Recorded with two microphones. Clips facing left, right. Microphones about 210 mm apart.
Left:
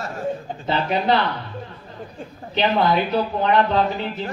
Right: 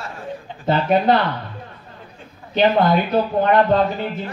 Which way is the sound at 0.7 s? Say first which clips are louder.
Right 4 dB; 50° right (ahead or behind).